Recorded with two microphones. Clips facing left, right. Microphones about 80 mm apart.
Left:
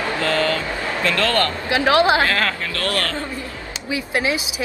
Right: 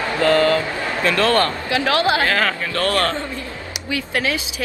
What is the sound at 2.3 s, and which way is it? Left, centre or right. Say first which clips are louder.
Speech: right 2 dB; centre.